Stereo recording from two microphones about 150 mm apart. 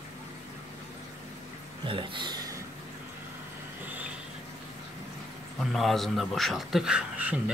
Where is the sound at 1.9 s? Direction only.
35° right (ahead or behind).